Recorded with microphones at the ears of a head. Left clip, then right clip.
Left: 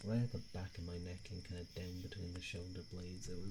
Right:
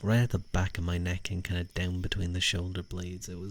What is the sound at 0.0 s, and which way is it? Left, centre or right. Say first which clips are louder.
Speech: right 13 dB; right.